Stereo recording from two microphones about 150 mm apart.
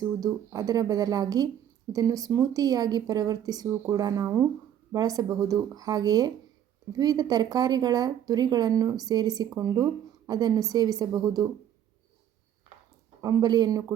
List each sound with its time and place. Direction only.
0.0 s speech: 25° right (ahead or behind)
13.2 s speech: 25° right (ahead or behind)